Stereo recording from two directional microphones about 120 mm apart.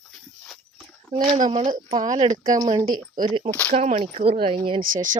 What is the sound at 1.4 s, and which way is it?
Speech, 35° right (ahead or behind).